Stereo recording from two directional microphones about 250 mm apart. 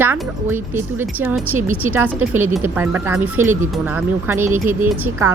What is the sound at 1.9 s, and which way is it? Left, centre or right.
Speech, centre.